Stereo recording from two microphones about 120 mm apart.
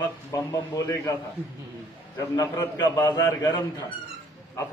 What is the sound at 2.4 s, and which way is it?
A man's voice, 25° left (ahead or behind).